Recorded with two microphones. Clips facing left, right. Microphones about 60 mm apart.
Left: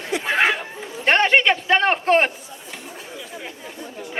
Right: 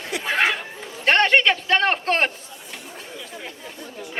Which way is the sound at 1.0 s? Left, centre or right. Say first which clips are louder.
Left 1 dB; centre.